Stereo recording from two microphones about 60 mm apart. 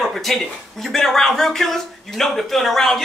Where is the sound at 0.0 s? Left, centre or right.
Centre.